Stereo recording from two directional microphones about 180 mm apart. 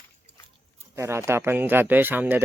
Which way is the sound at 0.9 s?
15° right (ahead or behind).